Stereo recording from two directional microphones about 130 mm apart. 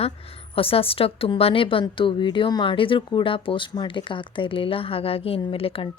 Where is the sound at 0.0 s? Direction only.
45° left (ahead or behind).